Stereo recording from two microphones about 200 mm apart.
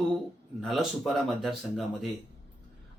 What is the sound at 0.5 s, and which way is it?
A man's voice, centre (ahead or behind).